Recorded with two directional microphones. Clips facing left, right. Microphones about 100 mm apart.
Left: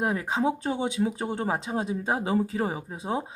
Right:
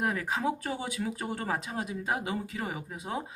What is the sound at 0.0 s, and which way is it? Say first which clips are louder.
Speech: left 4 dB; 25° left (ahead or behind).